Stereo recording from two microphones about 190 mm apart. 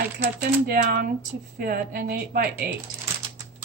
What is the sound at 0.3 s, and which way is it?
Speech, 50° right (ahead or behind).